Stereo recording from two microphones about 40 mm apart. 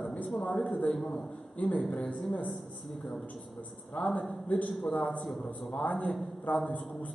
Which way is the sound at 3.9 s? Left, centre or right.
Left.